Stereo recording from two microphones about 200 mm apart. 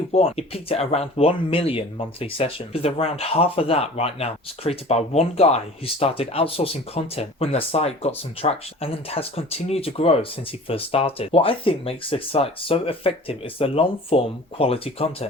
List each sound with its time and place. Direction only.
0.1 s speech: 30° left (ahead or behind)